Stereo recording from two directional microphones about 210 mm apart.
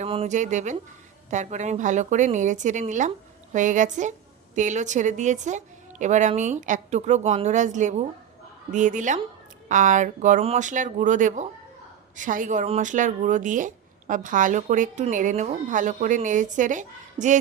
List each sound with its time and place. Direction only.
0.0 s a woman's voice: 30° right (ahead or behind)